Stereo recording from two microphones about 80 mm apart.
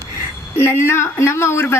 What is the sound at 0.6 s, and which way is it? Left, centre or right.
Speech, left.